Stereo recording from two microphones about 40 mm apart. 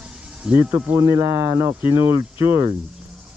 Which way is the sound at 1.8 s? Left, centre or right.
Right.